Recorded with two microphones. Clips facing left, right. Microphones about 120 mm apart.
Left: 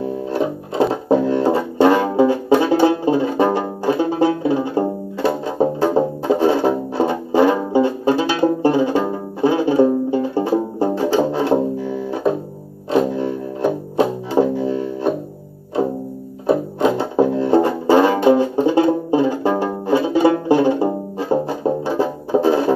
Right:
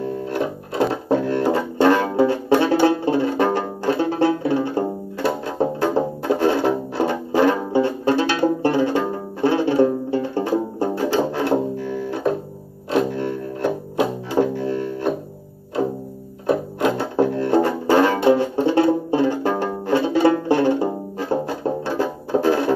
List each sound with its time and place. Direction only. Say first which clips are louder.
0.0 s music: left 3 dB; 15° left (ahead or behind)
16.4 s music: left 3 dB; 15° left (ahead or behind)